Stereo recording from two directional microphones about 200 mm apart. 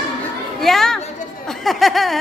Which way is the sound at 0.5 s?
Centre (ahead or behind).